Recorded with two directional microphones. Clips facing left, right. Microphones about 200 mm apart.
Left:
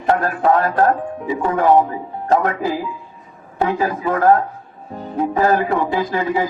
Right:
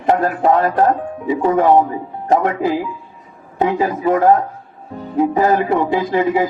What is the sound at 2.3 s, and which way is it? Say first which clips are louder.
Speech: right 2 dB; 20° right (ahead or behind).